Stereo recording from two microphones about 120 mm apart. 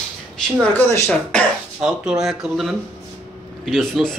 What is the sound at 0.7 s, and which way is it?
Speech, 25° left (ahead or behind).